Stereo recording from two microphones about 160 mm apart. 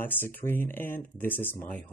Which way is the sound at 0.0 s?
15° left (ahead or behind).